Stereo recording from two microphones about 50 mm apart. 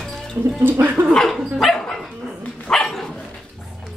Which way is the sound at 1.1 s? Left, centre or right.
Centre.